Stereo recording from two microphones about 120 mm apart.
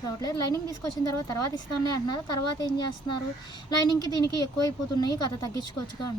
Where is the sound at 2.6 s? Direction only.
35° left (ahead or behind).